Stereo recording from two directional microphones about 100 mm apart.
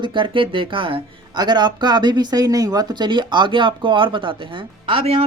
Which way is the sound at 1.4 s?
45° right (ahead or behind).